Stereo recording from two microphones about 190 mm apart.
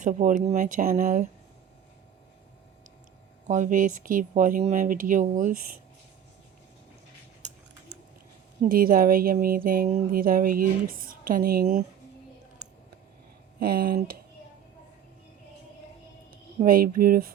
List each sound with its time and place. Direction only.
0.0 s speech: 40° right (ahead or behind)
3.4 s speech: 40° right (ahead or behind)
8.6 s speech: 50° right (ahead or behind)
13.6 s speech: 55° right (ahead or behind)
16.6 s speech: 50° right (ahead or behind)